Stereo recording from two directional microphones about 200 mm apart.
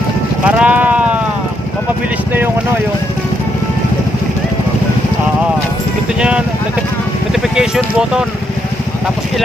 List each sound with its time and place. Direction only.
0.5 s sheep: 10° right (ahead or behind)
7.5 s speech: 5° right (ahead or behind)